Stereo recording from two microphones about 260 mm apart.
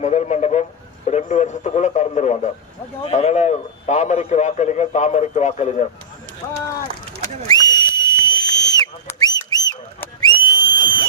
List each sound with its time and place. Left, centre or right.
0.0 s speech: left
1.0 s radio: left
3.0 s a man's voice: left
7.4 s a sound: centre